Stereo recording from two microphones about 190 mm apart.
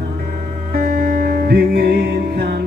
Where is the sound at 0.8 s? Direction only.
45° right (ahead or behind).